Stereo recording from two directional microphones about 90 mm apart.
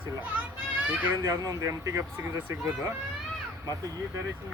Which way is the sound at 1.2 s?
35° right (ahead or behind).